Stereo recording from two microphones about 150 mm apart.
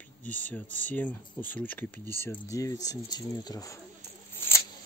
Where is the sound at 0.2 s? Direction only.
10° left (ahead or behind).